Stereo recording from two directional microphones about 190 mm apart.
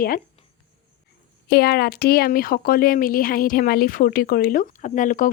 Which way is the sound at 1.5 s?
55° left (ahead or behind).